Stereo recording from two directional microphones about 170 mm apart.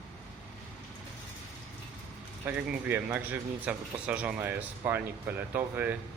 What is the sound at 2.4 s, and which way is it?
Speech, 10° right (ahead or behind).